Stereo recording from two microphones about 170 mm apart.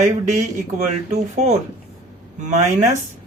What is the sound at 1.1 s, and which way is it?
Speech, 40° right (ahead or behind).